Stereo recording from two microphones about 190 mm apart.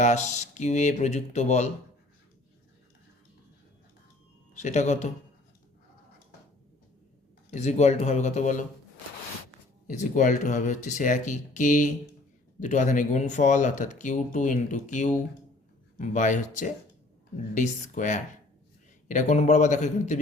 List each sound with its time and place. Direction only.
0.0 s speech: 40° left (ahead or behind)
4.6 s speech: 35° left (ahead or behind)
7.5 s speech: 35° left (ahead or behind)
9.8 s speech: 40° left (ahead or behind)